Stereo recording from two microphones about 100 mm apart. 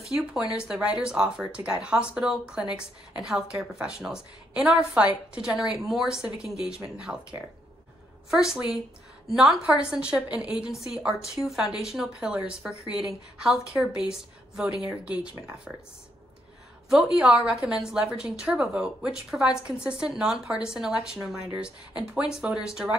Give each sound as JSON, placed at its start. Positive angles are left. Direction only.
{"t": 0.0, "sound": "a woman's voice", "side_deg": -5}
{"t": 16.9, "sound": "a woman's voice", "side_deg": -10}